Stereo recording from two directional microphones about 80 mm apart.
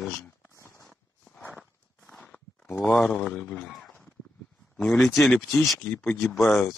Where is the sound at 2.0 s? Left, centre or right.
Centre.